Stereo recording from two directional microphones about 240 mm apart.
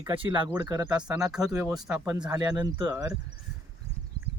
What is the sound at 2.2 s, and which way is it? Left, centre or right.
Speech, centre.